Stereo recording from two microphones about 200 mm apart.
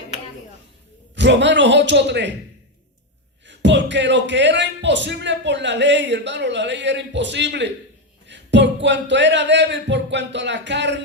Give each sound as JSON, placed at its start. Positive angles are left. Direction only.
{"t": 1.1, "sound": "speech", "side_deg": -60}
{"t": 3.4, "sound": "speech", "side_deg": -60}